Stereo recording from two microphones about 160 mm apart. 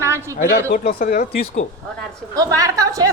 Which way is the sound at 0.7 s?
65° left (ahead or behind).